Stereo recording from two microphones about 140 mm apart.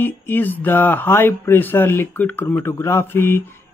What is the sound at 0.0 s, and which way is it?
Speech, 15° left (ahead or behind).